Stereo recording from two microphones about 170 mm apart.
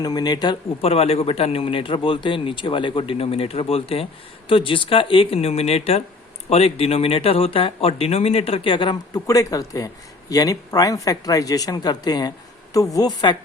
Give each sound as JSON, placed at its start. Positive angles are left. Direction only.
{"t": 0.0, "sound": "speech", "side_deg": 25}